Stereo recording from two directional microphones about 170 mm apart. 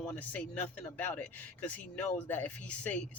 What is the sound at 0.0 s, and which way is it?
Speech, 10° left (ahead or behind).